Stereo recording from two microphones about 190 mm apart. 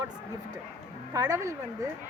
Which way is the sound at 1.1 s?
15° right (ahead or behind).